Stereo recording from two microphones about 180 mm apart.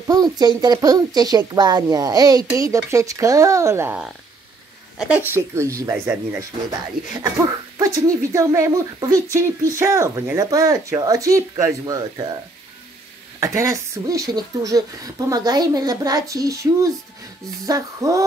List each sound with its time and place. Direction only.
0.0 s speech: 20° right (ahead or behind)
7.8 s speech: 20° right (ahead or behind)
13.4 s speech: 15° right (ahead or behind)